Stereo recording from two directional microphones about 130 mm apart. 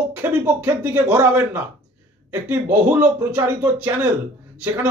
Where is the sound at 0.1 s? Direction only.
15° right (ahead or behind).